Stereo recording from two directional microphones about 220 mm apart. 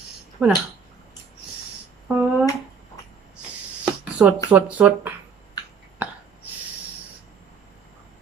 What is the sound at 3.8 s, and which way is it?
Speech, 5° right (ahead or behind).